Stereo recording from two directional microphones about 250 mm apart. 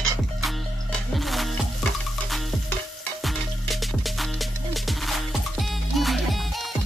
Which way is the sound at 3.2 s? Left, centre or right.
Centre.